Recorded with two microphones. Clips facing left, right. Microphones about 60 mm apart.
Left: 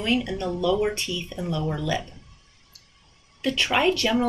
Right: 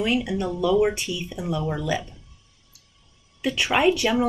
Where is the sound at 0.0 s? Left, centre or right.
Centre.